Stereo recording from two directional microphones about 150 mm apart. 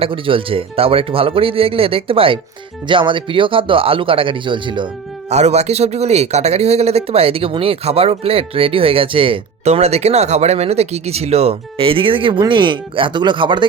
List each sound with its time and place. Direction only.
0.0 s speech: 35° right (ahead or behind)
5.3 s speech: 45° right (ahead or behind); by 13.7 s 30° right (ahead or behind)